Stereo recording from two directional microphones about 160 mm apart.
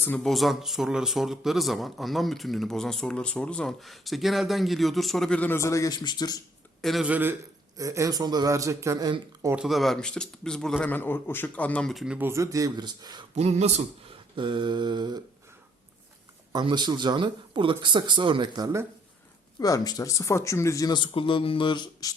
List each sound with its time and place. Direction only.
0.0 s speech: 5° left (ahead or behind); by 6.4 s 25° left (ahead or behind)
6.8 s a man's voice: 5° right (ahead or behind); by 9.6 s 20° right (ahead or behind)
9.6 s speech: centre (ahead or behind); by 13.2 s 25° right (ahead or behind)
13.3 s speech: 45° right (ahead or behind)
14.3 s speech: 30° right (ahead or behind)
16.5 s speech: 25° right (ahead or behind)
19.5 s speech: 20° left (ahead or behind)